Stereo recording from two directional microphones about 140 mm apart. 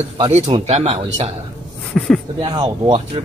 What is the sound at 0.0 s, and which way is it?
Speech, 50° right (ahead or behind).